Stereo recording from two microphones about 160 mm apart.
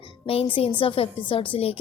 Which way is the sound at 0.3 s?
35° left (ahead or behind).